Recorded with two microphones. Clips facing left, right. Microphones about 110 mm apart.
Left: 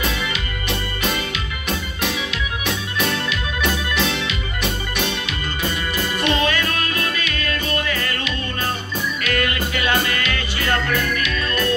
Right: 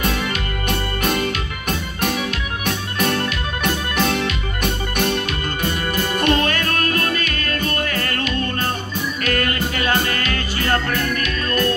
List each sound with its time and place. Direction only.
0.0 s music: 45° right (ahead or behind)
2.6 s organ: 50° right (ahead or behind)
3.9 s music: 45° right (ahead or behind)